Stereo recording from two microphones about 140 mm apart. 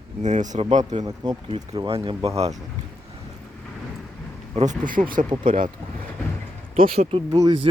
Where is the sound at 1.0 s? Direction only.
30° right (ahead or behind).